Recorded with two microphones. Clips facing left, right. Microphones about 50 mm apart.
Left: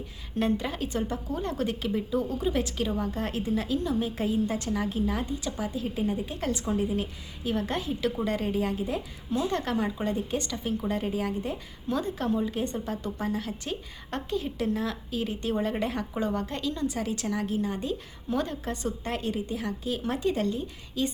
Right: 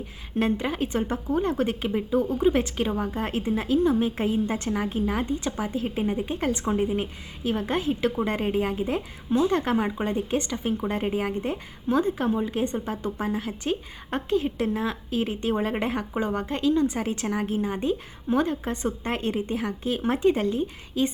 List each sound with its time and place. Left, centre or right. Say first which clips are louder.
0.3 s a woman's voice: right 3 dB; right
0.9 s a woman's voice: right 5 dB; right